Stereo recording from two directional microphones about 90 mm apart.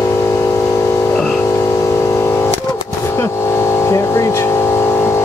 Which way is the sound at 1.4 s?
30° left (ahead or behind).